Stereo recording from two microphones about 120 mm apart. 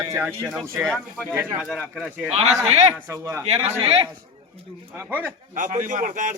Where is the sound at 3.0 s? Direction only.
25° right (ahead or behind).